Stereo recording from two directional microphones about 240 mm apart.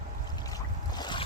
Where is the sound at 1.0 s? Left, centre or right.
Centre.